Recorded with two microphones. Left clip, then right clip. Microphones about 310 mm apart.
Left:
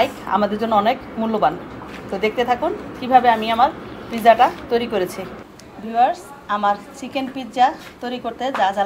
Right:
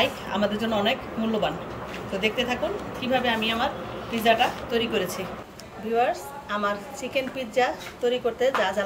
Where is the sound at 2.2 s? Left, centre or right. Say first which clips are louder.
Left 7 dB; centre.